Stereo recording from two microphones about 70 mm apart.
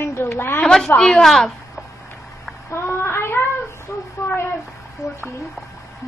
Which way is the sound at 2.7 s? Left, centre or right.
Left.